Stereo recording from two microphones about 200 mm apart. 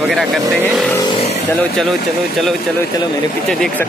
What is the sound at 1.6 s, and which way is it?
Speech, centre (ahead or behind).